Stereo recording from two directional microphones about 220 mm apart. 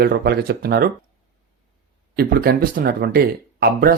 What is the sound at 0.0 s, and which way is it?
Speech, 45° right (ahead or behind).